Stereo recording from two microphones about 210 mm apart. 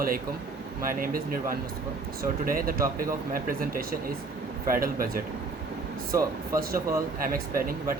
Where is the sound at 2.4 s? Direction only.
40° right (ahead or behind).